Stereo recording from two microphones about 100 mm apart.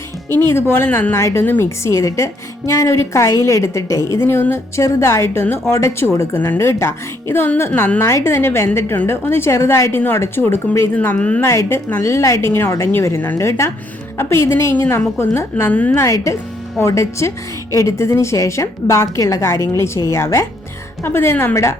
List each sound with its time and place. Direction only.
0.3 s a woman's voice: 20° left (ahead or behind)
11.4 s a woman's voice: 30° left (ahead or behind)
16.0 s a woman's voice: 30° left (ahead or behind)